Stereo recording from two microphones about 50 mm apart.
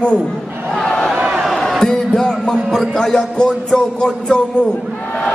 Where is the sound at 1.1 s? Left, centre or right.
Right.